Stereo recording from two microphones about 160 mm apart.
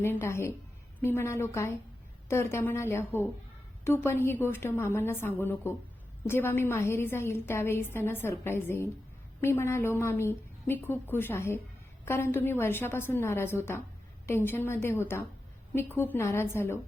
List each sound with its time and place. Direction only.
0.0 s a woman's voice: 15° left (ahead or behind)